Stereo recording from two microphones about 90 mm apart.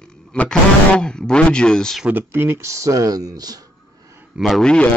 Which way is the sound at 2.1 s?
25° right (ahead or behind).